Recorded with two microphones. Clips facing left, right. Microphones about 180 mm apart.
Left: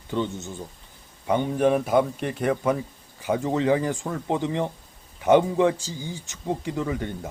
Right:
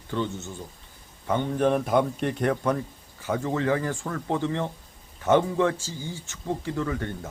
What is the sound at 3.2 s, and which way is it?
A man's voice, 15° left (ahead or behind).